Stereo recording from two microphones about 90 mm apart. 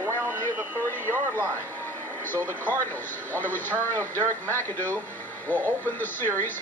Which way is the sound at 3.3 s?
20° left (ahead or behind).